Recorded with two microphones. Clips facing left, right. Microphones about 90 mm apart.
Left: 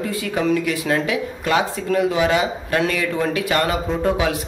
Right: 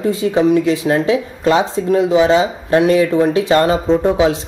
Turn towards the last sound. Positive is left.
turn(degrees=-20)  # may be behind; listen again after turning